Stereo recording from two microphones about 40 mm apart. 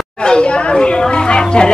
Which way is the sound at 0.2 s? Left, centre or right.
Left.